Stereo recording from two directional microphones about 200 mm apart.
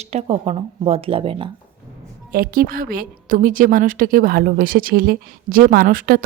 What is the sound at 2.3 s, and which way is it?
A woman's voice, 45° right (ahead or behind).